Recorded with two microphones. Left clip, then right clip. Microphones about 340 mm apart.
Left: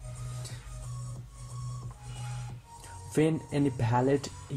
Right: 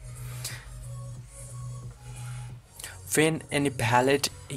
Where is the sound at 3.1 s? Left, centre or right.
Right.